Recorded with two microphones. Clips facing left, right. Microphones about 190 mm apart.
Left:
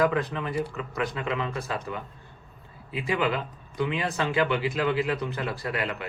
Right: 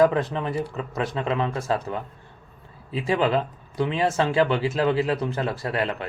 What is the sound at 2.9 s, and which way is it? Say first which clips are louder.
A man's voice: right 5 dB; 35° right (ahead or behind).